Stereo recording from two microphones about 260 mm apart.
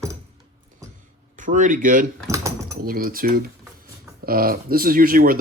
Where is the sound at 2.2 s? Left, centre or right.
Centre.